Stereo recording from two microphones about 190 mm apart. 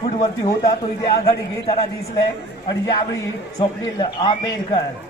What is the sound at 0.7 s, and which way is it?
A man's voice, 20° left (ahead or behind).